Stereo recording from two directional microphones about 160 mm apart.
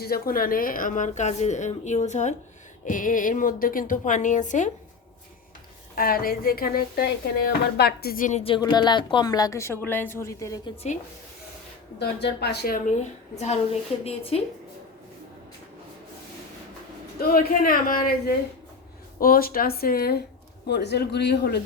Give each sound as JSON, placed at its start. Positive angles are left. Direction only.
{"t": 0.0, "sound": "a woman's voice", "side_deg": 70}
{"t": 6.0, "sound": "a woman's voice", "side_deg": 65}
{"t": 8.4, "sound": "a woman's voice", "side_deg": 30}
{"t": 11.9, "sound": "a man's voice", "side_deg": 90}
{"t": 14.0, "sound": "a woman's voice", "side_deg": 40}
{"t": 17.2, "sound": "a woman's voice", "side_deg": 65}
{"t": 20.7, "sound": "a man's voice", "side_deg": 90}